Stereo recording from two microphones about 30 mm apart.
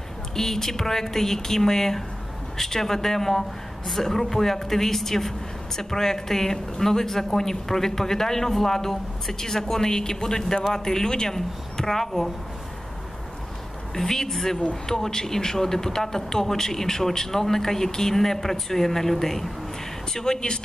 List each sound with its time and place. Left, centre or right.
0.4 s speech: centre
13.9 s speech: centre
20.2 s speech: left